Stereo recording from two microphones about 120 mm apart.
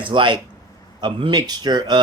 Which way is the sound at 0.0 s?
40° right (ahead or behind).